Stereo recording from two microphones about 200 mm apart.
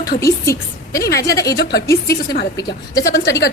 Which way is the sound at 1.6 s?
55° left (ahead or behind).